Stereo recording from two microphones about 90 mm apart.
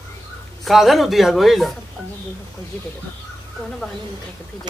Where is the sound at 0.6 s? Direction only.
Centre (ahead or behind).